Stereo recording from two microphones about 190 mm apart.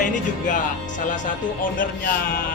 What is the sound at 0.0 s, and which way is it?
Music, 45° left (ahead or behind).